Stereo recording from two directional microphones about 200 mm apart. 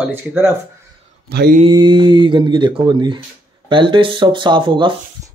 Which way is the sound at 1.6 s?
25° right (ahead or behind).